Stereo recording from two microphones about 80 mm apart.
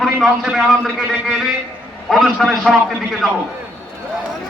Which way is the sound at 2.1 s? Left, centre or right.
Centre.